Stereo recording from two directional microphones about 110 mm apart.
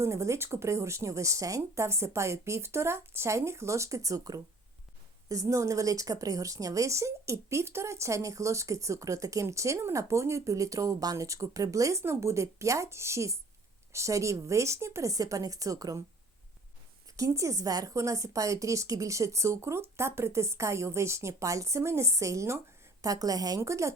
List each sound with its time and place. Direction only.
0.0 s speech: 25° right (ahead or behind)
17.2 s speech: 30° right (ahead or behind)